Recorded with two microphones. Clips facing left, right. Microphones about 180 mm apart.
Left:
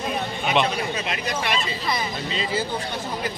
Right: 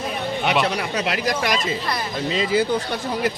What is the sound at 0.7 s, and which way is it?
Speech, 75° right (ahead or behind).